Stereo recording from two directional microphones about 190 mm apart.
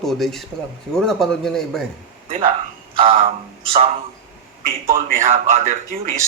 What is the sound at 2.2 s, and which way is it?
Speech, 30° right (ahead or behind).